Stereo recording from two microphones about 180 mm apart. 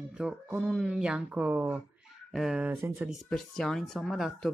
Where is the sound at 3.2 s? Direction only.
Centre (ahead or behind).